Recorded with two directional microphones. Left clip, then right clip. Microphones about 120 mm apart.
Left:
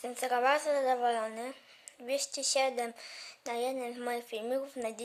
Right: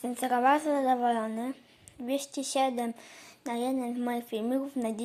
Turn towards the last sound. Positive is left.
turn(degrees=5)  # may be behind; listen again after turning